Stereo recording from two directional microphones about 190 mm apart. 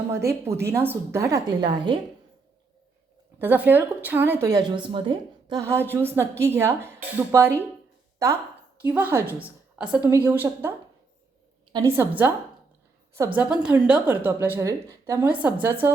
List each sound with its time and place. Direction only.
0.1 s a woman's voice: 15° right (ahead or behind)
3.3 s a woman's voice: 10° right (ahead or behind)
8.8 s a woman's voice: 10° right (ahead or behind)